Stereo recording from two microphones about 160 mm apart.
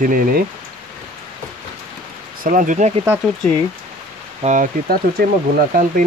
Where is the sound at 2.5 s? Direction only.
55° right (ahead or behind).